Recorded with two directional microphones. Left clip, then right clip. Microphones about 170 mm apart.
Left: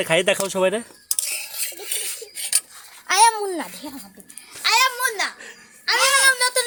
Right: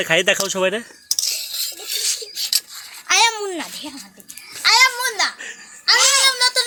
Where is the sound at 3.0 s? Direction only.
35° left (ahead or behind).